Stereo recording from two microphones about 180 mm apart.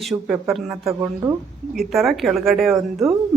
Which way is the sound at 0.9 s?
15° right (ahead or behind).